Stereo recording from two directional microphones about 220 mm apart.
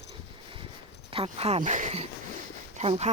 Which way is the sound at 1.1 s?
25° right (ahead or behind).